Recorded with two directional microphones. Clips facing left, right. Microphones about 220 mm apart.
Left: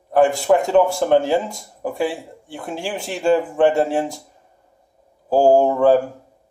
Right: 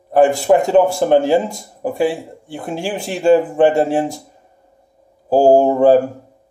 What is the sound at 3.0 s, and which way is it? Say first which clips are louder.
Speech: right 5 dB; 5° right (ahead or behind).